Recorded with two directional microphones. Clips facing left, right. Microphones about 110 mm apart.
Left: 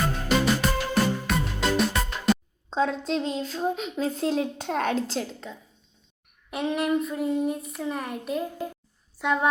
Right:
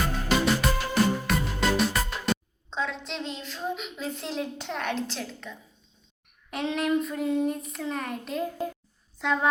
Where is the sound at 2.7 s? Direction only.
40° left (ahead or behind).